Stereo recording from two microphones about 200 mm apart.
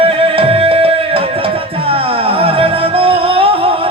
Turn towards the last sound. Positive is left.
turn(degrees=-30)  # may be behind; listen again after turning